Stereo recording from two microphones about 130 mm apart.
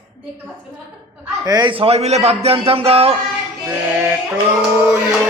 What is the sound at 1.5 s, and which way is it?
Speech, 30° right (ahead or behind).